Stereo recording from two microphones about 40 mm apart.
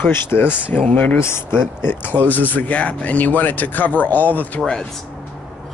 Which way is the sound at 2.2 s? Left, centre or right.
Left.